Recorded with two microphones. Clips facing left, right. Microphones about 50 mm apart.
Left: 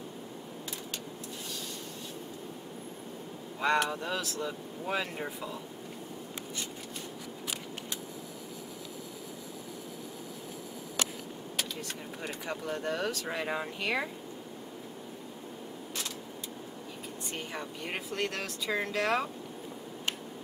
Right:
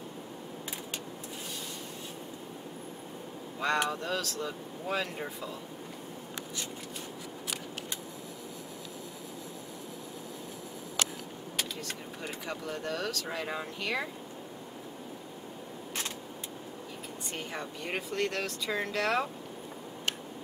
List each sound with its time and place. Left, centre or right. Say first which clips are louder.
3.6 s speech: left 1 dB; centre
12.2 s speech: left 2 dB; centre
17.4 s speech: right 1 dB; centre